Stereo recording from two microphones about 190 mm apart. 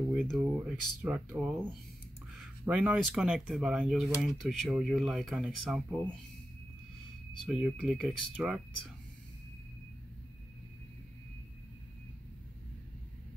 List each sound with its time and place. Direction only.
0.1 s speech: centre (ahead or behind)
2.6 s speech: 5° right (ahead or behind)
7.4 s speech: 5° right (ahead or behind)